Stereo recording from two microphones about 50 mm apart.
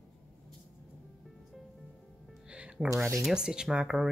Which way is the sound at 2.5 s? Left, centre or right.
Right.